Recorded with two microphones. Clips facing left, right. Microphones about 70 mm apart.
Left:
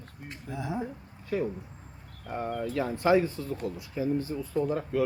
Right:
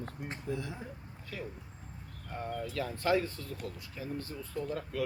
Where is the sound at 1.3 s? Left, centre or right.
Left.